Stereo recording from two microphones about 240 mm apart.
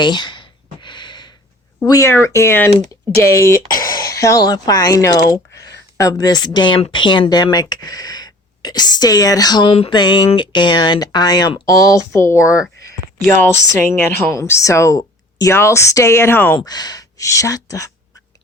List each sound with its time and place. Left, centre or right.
0.0 s a sound: centre
1.8 s speech: centre
4.0 s speech: centre